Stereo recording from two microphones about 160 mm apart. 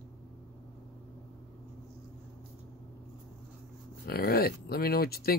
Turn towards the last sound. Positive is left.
turn(degrees=70)  # may be behind; listen again after turning